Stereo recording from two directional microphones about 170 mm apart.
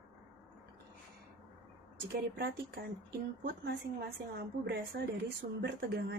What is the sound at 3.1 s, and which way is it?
Speech, 60° right (ahead or behind).